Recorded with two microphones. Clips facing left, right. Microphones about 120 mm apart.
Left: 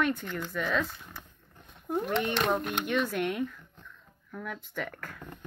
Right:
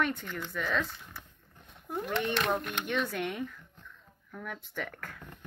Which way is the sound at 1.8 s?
15° left (ahead or behind).